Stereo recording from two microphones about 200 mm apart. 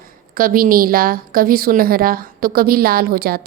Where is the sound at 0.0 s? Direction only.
45° right (ahead or behind).